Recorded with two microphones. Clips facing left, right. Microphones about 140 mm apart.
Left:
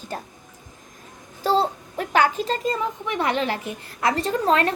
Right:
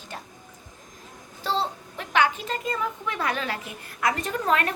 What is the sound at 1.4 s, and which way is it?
A child's voice, 40° left (ahead or behind).